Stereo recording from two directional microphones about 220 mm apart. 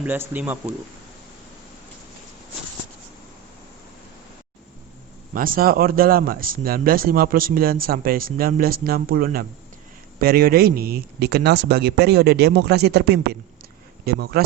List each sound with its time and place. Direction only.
0.0 s speech: 10° right (ahead or behind)
5.3 s speech: 40° right (ahead or behind)